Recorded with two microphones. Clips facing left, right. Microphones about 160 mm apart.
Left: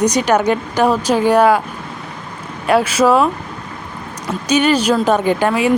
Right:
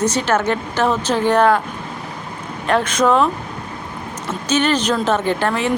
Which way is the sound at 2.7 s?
10° left (ahead or behind).